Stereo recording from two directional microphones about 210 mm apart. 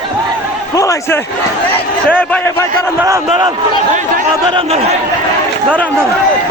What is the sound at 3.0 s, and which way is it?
Speech, 15° right (ahead or behind).